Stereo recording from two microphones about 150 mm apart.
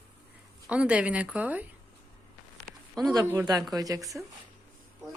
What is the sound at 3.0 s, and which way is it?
Speech, 25° right (ahead or behind).